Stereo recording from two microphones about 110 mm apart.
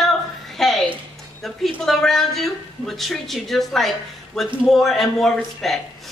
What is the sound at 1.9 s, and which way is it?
A woman's voice, 5° left (ahead or behind).